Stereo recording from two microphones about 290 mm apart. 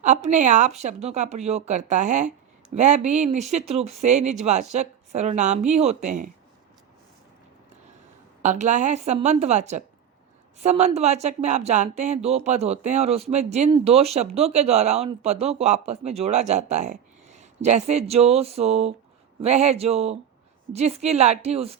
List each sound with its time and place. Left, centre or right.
0.0 s speech: right
8.4 s speech: right